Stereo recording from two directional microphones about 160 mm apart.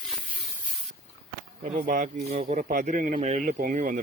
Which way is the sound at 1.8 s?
60° right (ahead or behind).